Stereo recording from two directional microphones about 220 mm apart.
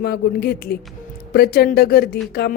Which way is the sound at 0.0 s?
45° left (ahead or behind).